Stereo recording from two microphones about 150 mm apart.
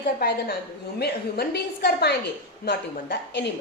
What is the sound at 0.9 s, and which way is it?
A woman's voice, 90° left.